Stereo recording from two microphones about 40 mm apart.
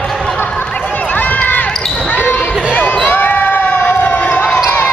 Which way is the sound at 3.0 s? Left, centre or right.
Left.